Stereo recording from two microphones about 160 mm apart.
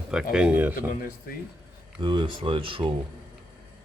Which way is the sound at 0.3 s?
10° right (ahead or behind).